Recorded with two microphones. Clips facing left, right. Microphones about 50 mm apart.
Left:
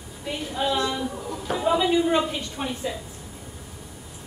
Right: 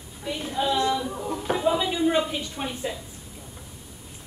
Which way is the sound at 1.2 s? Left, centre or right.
Centre.